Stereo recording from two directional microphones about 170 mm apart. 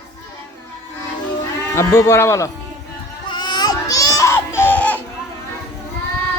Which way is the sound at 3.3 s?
25° left (ahead or behind).